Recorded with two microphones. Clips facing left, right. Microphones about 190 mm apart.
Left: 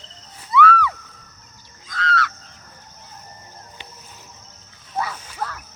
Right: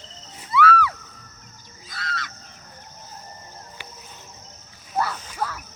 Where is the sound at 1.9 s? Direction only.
10° right (ahead or behind).